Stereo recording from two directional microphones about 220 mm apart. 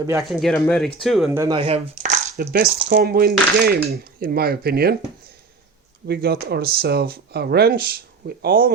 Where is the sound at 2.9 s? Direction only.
45° right (ahead or behind).